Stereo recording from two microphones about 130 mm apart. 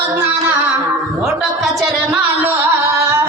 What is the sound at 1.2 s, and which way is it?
Music, centre (ahead or behind).